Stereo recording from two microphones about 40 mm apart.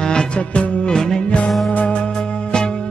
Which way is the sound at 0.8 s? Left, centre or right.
Centre.